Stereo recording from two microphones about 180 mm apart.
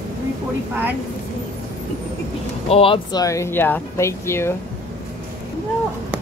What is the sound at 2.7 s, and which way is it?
Speech, 30° left (ahead or behind).